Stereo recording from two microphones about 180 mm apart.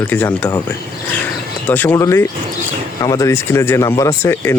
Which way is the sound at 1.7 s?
10° left (ahead or behind).